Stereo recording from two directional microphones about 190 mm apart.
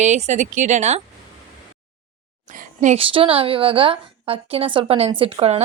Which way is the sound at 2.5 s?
45° right (ahead or behind).